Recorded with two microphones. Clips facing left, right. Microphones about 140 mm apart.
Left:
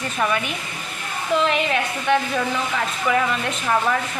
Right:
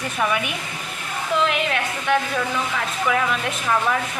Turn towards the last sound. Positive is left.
turn(degrees=0)  # may be behind; listen again after turning